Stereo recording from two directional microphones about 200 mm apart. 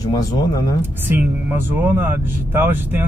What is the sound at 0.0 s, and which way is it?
Speech, 15° left (ahead or behind).